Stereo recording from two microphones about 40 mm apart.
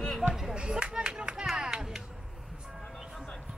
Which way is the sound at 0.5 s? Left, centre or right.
Right.